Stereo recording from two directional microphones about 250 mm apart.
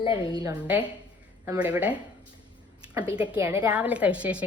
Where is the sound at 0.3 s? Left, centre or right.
Centre.